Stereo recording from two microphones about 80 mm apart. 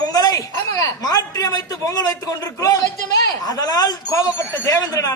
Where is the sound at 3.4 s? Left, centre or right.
Left.